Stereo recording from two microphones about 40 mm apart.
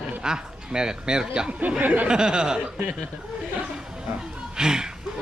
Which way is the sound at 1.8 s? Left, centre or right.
Right.